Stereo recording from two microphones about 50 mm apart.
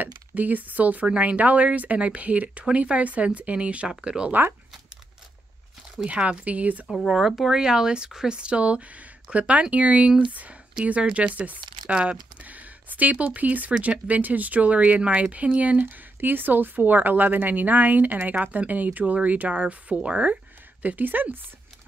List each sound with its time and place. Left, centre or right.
0.0 s speech: right; by 4.3 s centre
4.3 s speech: right
6.0 s speech: right
7.1 s speech: centre
11.3 s speech: right
12.4 s speech: right
15.8 s speech: right
20.8 s speech: right